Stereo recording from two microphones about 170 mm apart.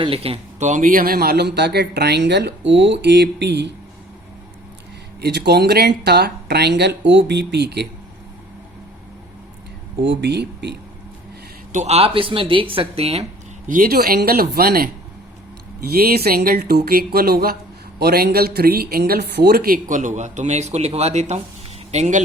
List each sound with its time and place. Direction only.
0.0 s speech: 35° right (ahead or behind); by 3.7 s 90° right
5.2 s speech: 75° right (ahead or behind)
10.0 s speech: 90° right
11.7 s speech: 40° right (ahead or behind)
13.7 s speech: 55° right (ahead or behind)